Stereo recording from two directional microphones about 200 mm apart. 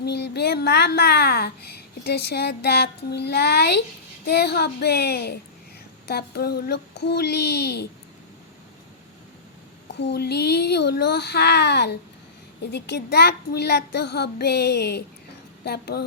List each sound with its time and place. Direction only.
0.0 s a child's voice: 55° left (ahead or behind)
6.1 s child singing: 55° left (ahead or behind)
9.9 s child singing: 55° left (ahead or behind)
15.6 s a child's voice: 55° left (ahead or behind)